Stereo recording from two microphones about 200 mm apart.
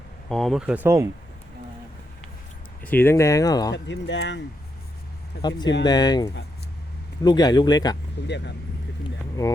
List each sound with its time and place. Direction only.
0.3 s speech: centre (ahead or behind)
2.8 s speech: 10° left (ahead or behind)
3.8 s speech: 60° left (ahead or behind)
5.4 s speech: 20° left (ahead or behind)
8.3 s speech: 60° left (ahead or behind)